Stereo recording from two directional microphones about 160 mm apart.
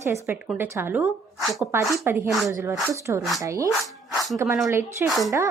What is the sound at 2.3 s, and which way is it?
Speech, centre (ahead or behind).